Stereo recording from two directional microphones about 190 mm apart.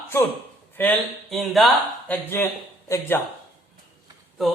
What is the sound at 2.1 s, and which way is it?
Speech, 10° left (ahead or behind).